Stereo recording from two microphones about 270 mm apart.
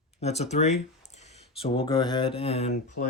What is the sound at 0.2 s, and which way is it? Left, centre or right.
Speech, left.